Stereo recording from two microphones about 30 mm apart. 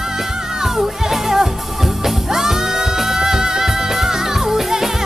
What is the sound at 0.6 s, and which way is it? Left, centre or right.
Music, centre.